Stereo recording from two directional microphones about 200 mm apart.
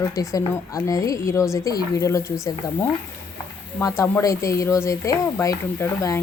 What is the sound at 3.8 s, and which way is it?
Speech, 15° left (ahead or behind).